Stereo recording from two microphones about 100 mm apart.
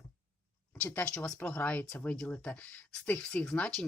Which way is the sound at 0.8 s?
15° left (ahead or behind).